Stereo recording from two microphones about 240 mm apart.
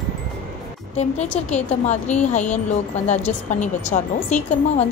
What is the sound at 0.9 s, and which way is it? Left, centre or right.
A woman's voice, left.